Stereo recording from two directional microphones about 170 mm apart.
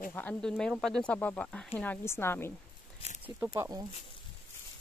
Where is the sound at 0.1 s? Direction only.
10° left (ahead or behind).